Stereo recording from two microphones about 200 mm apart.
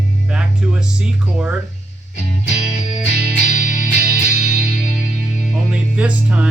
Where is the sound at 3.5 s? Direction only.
40° left (ahead or behind).